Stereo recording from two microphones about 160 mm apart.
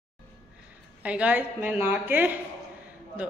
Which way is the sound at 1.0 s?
10° right (ahead or behind).